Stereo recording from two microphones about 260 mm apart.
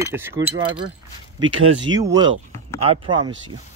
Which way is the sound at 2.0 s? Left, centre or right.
Centre.